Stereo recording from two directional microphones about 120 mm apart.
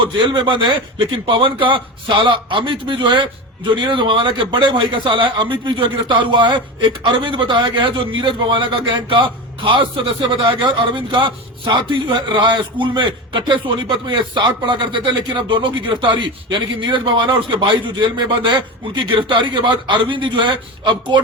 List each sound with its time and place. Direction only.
0.0 s a man's voice: 45° right (ahead or behind)